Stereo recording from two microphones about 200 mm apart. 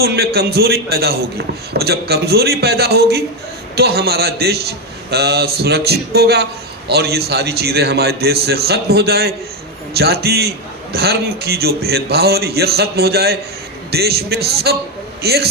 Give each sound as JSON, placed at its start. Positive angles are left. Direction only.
{"t": 0.0, "sound": "a man's voice", "side_deg": -55}